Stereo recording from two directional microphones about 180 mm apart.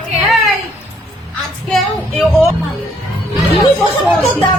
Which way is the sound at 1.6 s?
5° left (ahead or behind).